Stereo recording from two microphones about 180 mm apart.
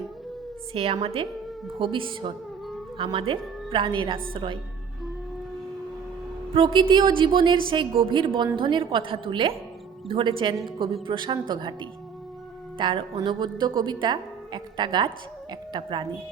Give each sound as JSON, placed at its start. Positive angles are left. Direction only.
{"t": 0.7, "sound": "a woman's voice", "side_deg": -30}
{"t": 6.7, "sound": "speech", "side_deg": -25}